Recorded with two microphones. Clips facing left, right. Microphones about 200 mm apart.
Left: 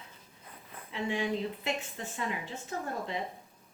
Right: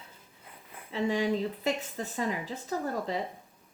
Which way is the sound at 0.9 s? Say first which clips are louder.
Right 4 dB; 40° right (ahead or behind).